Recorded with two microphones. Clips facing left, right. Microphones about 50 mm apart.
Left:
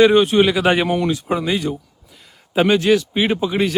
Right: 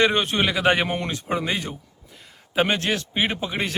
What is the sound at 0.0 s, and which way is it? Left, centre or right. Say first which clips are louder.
A man's voice: left 8 dB; right.